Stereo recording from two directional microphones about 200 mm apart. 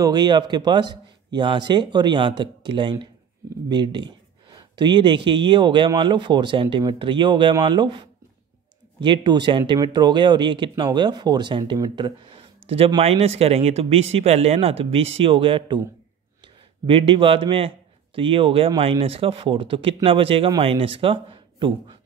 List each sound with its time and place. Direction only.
0.0 s speech: 20° right (ahead or behind)
16.8 s speech: 25° right (ahead or behind)